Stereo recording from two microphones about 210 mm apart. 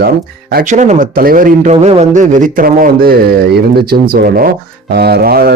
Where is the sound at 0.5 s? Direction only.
35° right (ahead or behind).